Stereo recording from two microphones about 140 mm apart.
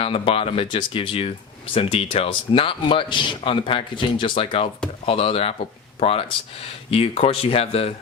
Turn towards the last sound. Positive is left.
turn(degrees=45)  # may be behind; listen again after turning